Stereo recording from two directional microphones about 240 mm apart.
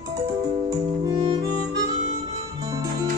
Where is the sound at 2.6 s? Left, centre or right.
Centre.